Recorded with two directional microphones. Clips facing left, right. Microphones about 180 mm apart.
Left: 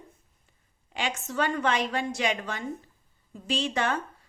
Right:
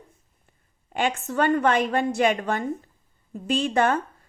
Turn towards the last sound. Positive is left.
turn(degrees=-50)  # may be behind; listen again after turning